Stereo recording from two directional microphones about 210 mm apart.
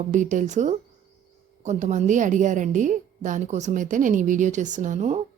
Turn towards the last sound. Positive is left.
turn(degrees=-35)  # may be behind; listen again after turning